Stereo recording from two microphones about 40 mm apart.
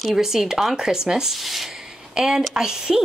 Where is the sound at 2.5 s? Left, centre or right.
Centre.